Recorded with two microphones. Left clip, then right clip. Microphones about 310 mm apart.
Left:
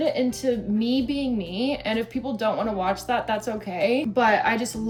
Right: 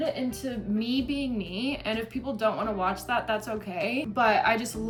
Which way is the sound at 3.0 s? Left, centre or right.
Centre.